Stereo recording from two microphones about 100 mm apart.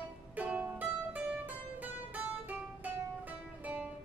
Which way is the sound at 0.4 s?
15° right (ahead or behind).